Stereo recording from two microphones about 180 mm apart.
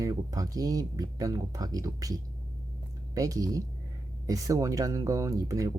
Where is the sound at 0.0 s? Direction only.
20° right (ahead or behind).